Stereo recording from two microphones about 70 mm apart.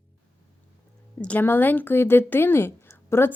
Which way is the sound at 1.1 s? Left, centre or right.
Left.